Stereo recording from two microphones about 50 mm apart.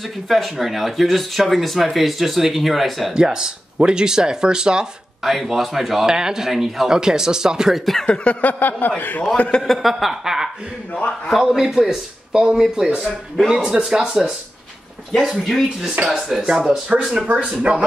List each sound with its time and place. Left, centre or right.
0.3 s speech: centre
3.2 s speech: centre
5.2 s speech: centre
8.1 s a sound: left
9.6 s speech: centre
15.3 s speech: centre
17.6 s speech: right